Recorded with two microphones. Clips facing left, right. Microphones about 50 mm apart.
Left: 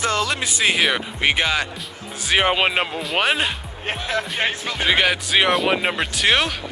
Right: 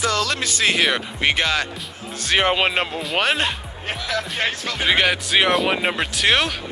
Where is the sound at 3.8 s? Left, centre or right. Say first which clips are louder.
Left 1 dB; left.